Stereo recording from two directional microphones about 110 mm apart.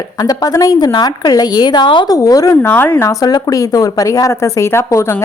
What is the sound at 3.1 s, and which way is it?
Speech, 35° left (ahead or behind).